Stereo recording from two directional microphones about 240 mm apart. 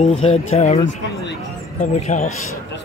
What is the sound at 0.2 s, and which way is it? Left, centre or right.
Speech, left.